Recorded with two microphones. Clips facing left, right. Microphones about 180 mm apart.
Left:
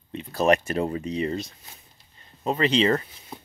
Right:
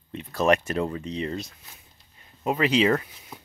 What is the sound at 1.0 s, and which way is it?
Speech, 5° left (ahead or behind).